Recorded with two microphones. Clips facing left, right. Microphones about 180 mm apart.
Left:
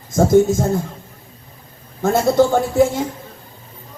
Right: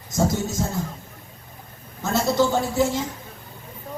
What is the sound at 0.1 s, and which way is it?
Speech, 50° left (ahead or behind).